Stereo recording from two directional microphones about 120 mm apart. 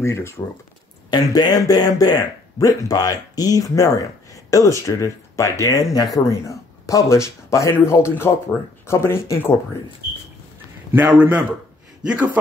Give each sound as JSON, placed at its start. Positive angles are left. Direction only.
{"t": 0.0, "sound": "speech", "side_deg": 25}
{"t": 1.1, "sound": "speech", "side_deg": 35}
{"t": 10.9, "sound": "a man's voice", "side_deg": -15}